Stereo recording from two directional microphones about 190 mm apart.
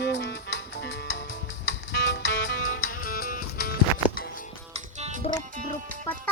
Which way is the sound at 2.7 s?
50° left (ahead or behind).